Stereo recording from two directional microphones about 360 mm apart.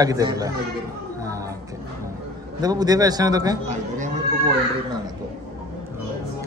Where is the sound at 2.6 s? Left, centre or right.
Centre.